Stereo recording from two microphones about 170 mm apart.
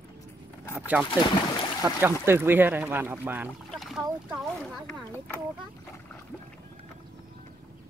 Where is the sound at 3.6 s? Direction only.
Centre (ahead or behind).